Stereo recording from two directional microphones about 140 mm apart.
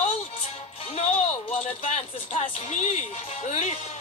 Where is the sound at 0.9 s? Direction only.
50° left (ahead or behind).